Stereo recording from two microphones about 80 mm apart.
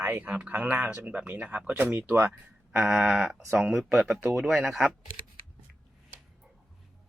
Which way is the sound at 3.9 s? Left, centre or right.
Centre.